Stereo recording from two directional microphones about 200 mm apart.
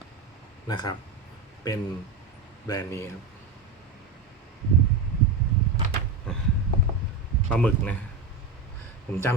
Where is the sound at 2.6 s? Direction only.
15° left (ahead or behind).